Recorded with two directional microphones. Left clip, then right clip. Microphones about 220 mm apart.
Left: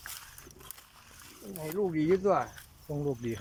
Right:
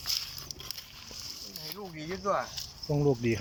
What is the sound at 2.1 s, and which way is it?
Speech, 45° left (ahead or behind).